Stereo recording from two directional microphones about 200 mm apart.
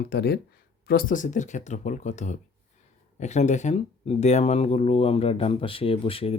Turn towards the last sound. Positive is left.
turn(degrees=30)  # may be behind; listen again after turning